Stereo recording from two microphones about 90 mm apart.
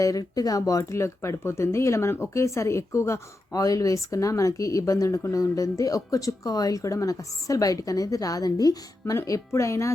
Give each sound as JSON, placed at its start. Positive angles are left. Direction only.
{"t": 0.0, "sound": "speech", "side_deg": 40}